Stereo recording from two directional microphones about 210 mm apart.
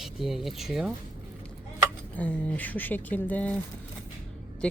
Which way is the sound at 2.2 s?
10° left (ahead or behind).